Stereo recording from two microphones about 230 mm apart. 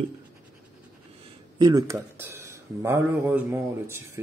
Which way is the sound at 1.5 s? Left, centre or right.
Centre.